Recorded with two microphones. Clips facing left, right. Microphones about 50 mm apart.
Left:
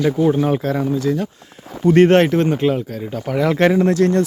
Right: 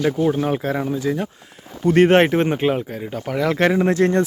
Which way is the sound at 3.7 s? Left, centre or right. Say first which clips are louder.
Left 2 dB; right.